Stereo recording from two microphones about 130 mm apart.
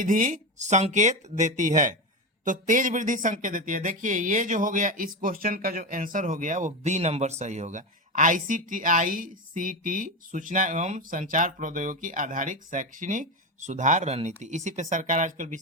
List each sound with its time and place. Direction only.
0.0 s speech: 85° right